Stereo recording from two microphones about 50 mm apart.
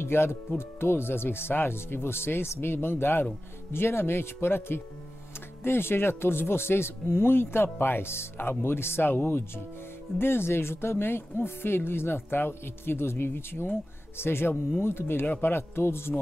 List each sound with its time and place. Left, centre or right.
0.0 s speech: left